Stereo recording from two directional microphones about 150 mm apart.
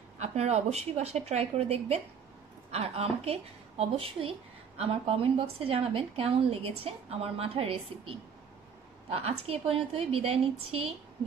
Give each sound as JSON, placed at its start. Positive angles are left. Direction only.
{"t": 0.2, "sound": "a woman's voice", "side_deg": -45}